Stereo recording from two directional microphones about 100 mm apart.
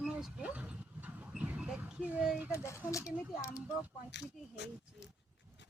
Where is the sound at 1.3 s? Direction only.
10° right (ahead or behind).